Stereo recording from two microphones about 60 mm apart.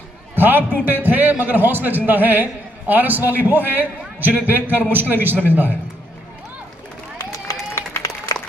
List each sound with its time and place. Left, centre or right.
0.4 s a man's voice: right
7.2 s run: left